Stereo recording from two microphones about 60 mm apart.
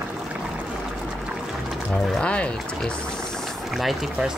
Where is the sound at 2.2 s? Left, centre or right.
Centre.